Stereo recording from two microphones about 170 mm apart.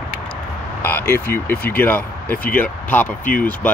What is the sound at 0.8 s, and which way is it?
Speech, 15° left (ahead or behind).